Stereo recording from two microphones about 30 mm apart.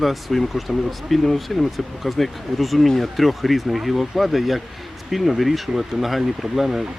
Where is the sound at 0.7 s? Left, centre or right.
Centre.